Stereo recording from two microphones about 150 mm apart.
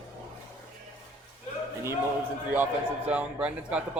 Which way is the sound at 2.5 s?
10° right (ahead or behind).